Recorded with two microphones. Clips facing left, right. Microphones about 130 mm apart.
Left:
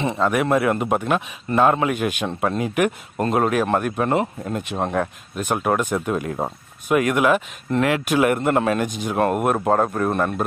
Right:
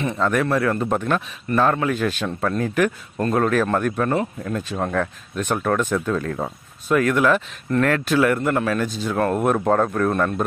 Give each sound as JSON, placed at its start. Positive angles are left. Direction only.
{"t": 0.2, "sound": "speech", "side_deg": 15}
{"t": 5.4, "sound": "speech", "side_deg": 10}